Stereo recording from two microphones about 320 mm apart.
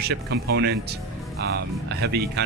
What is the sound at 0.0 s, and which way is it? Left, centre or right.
Speech, right.